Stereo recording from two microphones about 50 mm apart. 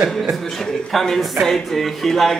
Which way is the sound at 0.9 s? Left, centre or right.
Centre.